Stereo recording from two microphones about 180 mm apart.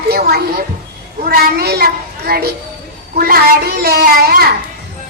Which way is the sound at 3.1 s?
55° right (ahead or behind).